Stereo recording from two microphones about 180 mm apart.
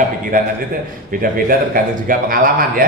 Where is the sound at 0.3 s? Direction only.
50° right (ahead or behind).